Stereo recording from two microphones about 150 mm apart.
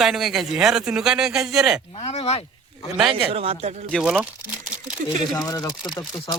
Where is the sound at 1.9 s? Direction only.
40° left (ahead or behind).